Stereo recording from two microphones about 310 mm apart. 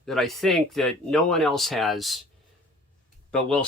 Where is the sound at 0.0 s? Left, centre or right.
Centre.